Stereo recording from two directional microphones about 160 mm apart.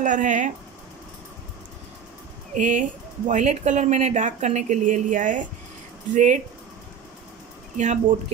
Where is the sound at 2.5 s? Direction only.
50° right (ahead or behind).